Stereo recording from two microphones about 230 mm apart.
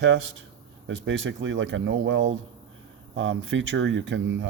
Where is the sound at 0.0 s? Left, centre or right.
Right.